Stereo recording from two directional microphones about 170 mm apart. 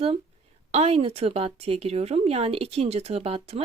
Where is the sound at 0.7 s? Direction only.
35° right (ahead or behind).